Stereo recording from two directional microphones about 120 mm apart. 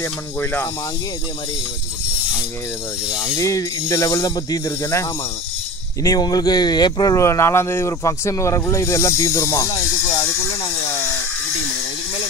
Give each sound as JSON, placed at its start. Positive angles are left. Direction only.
{"t": 0.0, "sound": "speech", "side_deg": 20}
{"t": 3.3, "sound": "speech", "side_deg": 30}
{"t": 6.0, "sound": "speech", "side_deg": 35}